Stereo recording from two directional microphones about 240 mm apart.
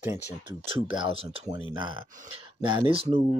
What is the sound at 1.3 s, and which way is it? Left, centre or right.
Speech, centre.